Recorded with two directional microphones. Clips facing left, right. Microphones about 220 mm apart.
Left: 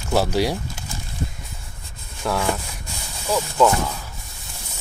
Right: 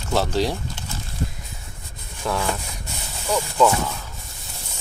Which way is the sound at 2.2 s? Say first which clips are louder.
Left 2 dB; centre (ahead or behind).